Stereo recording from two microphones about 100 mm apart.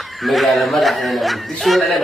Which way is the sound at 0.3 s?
Centre (ahead or behind).